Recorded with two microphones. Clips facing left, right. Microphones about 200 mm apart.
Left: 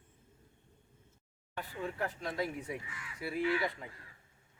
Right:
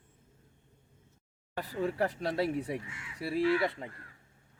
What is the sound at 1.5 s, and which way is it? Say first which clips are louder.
Speech: right 7 dB; 35° right (ahead or behind).